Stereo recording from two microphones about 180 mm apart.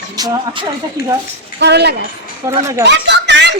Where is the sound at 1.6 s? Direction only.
65° right (ahead or behind).